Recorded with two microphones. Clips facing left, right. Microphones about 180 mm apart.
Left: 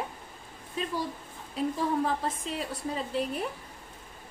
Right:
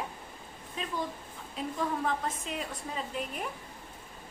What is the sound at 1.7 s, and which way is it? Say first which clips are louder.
A woman's voice: left 1 dB; 35° left (ahead or behind).